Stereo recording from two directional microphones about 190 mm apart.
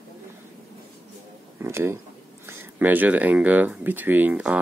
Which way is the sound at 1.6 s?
15° right (ahead or behind).